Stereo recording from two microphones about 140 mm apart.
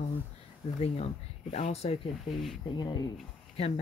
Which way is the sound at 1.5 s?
50° left (ahead or behind).